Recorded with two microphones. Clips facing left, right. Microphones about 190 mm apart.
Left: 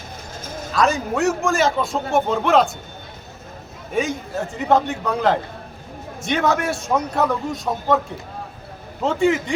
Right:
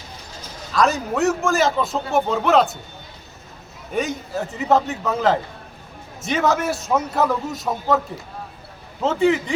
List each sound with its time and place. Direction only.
0.3 s a sound: 50° left (ahead or behind)
0.7 s a man's voice: centre (ahead or behind)
3.9 s a man's voice: centre (ahead or behind)